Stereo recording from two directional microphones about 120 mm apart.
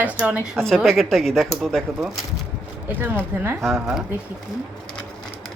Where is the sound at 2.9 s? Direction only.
15° right (ahead or behind).